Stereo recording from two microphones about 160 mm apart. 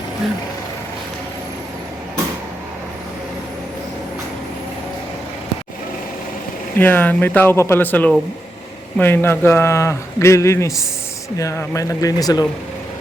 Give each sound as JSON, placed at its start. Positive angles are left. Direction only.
{"t": 6.7, "sound": "a man's voice", "side_deg": 10}